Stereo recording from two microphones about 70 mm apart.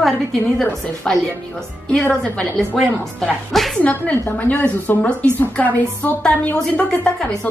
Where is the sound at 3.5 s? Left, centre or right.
Centre.